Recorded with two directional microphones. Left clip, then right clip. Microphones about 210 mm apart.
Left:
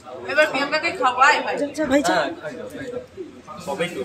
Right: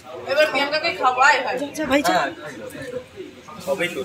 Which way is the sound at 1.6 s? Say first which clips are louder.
Even; 20° left (ahead or behind).